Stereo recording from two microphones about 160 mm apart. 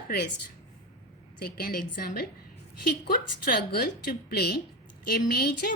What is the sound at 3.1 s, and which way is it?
Speech, 80° left.